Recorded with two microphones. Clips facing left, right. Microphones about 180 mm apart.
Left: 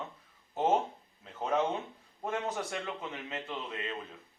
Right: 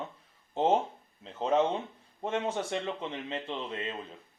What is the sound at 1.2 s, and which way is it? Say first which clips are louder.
A man's voice: right 4 dB; 25° right (ahead or behind).